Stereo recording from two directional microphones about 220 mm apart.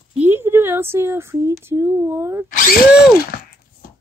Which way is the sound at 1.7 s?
10° right (ahead or behind).